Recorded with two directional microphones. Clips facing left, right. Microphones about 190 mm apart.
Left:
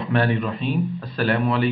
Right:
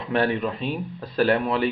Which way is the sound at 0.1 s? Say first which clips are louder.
Even; 15° right (ahead or behind).